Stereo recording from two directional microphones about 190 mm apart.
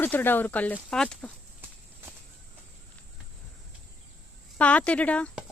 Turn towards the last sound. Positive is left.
turn(degrees=5)  # may be behind; listen again after turning